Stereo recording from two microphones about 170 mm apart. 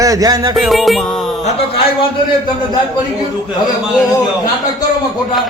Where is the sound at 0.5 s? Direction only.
Centre (ahead or behind).